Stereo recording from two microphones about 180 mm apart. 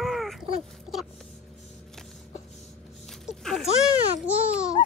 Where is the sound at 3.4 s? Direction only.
Centre (ahead or behind).